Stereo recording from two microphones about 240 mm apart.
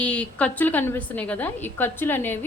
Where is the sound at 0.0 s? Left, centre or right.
Centre.